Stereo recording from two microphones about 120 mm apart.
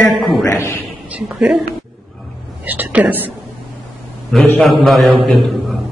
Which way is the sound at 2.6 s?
15° right (ahead or behind).